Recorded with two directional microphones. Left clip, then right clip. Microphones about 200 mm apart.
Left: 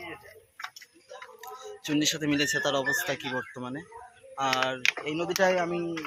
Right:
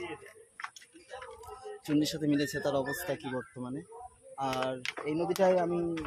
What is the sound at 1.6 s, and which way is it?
Speech, centre (ahead or behind).